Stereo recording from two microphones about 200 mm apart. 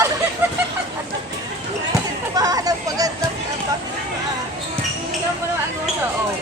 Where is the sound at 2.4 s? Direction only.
20° right (ahead or behind).